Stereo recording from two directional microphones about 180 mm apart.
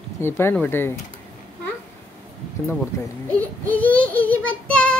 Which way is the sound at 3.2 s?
10° left (ahead or behind).